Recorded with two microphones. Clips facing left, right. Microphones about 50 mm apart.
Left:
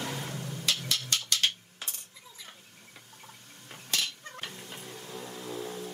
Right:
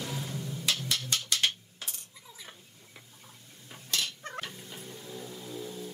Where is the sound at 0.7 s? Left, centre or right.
Centre.